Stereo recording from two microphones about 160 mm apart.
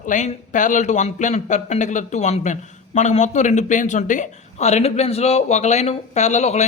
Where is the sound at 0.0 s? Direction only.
50° left (ahead or behind).